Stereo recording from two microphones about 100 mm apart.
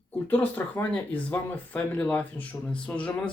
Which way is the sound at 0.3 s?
15° left (ahead or behind).